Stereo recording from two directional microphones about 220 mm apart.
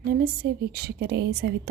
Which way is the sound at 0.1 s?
45° right (ahead or behind).